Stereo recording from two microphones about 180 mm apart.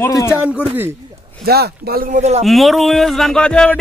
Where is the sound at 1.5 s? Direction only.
60° right (ahead or behind).